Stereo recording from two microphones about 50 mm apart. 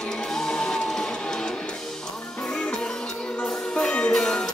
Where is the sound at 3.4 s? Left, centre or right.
Left.